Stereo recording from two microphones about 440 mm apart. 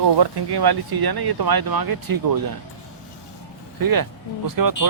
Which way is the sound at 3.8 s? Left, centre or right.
Right.